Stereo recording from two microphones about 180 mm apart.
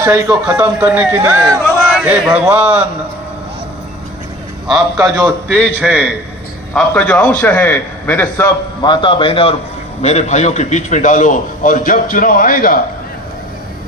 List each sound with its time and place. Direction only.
0.0 s a man's voice: 15° right (ahead or behind)
1.6 s a sound: centre (ahead or behind)
2.0 s a man's voice: 10° right (ahead or behind)
4.9 s a man's voice: 15° right (ahead or behind)
5.5 s a man's voice: centre (ahead or behind); by 12.8 s 50° left (ahead or behind)